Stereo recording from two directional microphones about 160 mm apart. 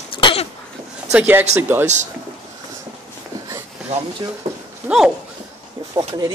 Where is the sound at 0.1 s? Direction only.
35° left (ahead or behind).